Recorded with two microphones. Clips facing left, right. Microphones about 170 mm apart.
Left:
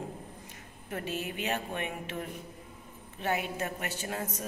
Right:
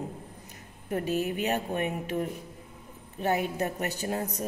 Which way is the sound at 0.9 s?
40° right (ahead or behind).